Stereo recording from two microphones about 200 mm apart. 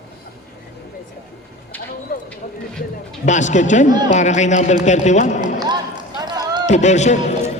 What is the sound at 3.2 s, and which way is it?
A man's voice, 35° left (ahead or behind).